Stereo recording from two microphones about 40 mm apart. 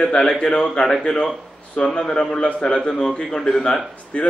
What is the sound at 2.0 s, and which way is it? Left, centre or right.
A man's voice, centre.